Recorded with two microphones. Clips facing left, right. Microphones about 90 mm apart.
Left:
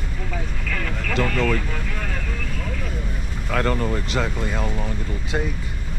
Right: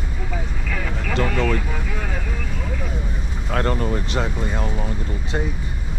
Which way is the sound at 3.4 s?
20° right (ahead or behind).